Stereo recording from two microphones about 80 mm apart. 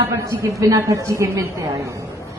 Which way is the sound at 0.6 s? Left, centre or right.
Right.